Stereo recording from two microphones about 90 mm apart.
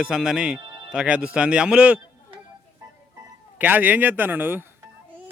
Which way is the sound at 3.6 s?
20° right (ahead or behind).